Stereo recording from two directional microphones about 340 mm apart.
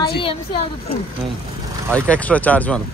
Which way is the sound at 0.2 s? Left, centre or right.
Centre.